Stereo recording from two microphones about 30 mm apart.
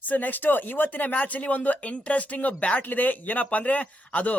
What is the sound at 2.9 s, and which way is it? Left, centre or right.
Speech, left.